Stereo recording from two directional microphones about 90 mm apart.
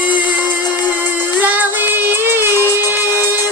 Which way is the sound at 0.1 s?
55° left (ahead or behind).